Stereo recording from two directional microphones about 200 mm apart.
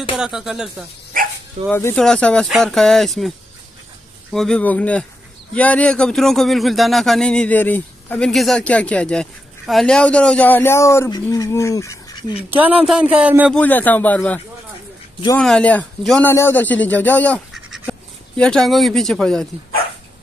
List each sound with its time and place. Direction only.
0.2 s speech: centre (ahead or behind)
1.1 s dog: 45° right (ahead or behind)
1.7 s speech: 10° left (ahead or behind)
12.8 s speech: 5° right (ahead or behind)
13.6 s speech: 10° left (ahead or behind)